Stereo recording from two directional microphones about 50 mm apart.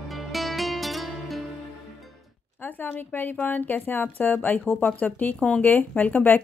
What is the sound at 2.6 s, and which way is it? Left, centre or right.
Speech, left.